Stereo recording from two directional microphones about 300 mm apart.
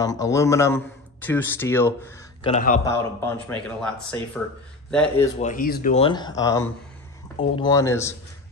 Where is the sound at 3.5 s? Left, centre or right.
Centre.